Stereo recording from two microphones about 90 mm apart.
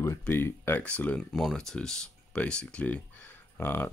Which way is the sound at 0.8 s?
15° left (ahead or behind).